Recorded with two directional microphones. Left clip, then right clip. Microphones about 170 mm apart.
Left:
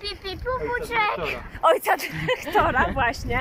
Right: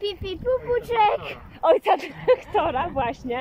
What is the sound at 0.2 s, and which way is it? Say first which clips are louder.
Speech: right 1 dB; 45° right (ahead or behind).